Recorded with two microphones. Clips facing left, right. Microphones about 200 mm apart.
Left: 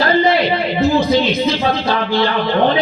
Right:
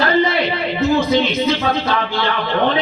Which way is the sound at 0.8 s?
35° left (ahead or behind).